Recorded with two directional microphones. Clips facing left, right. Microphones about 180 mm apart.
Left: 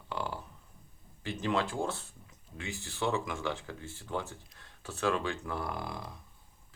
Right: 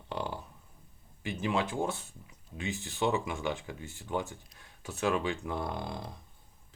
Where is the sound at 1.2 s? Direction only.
15° right (ahead or behind).